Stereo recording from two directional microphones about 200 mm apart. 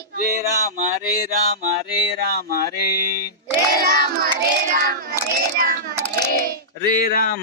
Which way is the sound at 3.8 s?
50° right (ahead or behind).